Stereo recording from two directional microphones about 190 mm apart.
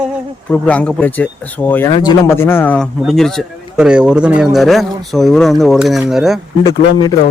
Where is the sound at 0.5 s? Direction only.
5° left (ahead or behind).